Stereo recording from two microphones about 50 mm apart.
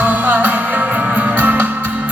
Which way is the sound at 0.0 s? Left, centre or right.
Right.